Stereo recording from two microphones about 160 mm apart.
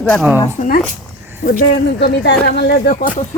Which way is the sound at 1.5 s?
80° left.